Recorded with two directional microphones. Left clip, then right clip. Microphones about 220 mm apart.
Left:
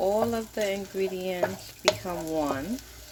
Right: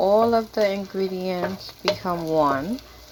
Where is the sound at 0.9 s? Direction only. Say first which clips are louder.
Right 3 dB; 5° right (ahead or behind).